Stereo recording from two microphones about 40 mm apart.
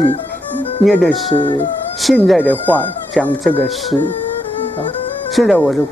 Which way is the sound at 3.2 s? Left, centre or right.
Left.